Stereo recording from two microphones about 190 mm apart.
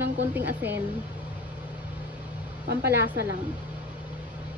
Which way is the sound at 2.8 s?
10° right (ahead or behind).